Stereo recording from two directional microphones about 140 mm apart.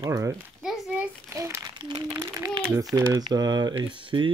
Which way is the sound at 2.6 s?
25° right (ahead or behind).